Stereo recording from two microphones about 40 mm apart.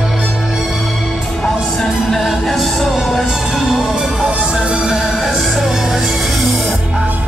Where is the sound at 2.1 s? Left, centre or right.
Centre.